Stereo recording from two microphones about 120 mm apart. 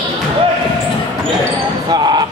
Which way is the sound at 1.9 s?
35° right (ahead or behind).